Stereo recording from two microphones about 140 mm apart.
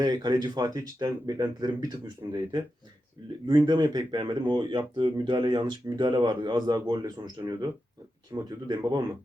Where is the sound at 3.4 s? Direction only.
30° right (ahead or behind).